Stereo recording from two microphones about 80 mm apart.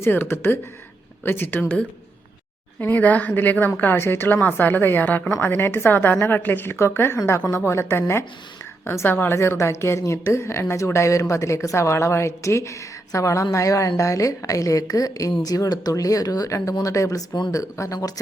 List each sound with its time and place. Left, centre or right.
0.0 s a woman's voice: left